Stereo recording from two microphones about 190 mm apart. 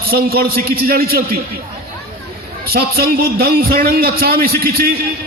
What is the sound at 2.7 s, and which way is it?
A man's voice, 55° right (ahead or behind).